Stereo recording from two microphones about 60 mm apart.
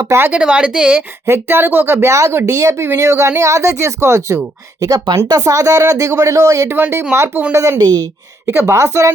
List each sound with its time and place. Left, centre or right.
0.3 s speech: right
1.3 s speech: right
4.8 s speech: right
6.7 s speech: right
7.5 s speech: right